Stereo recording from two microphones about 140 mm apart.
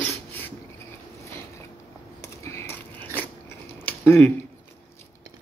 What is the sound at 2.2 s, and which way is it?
Biting, 20° left (ahead or behind).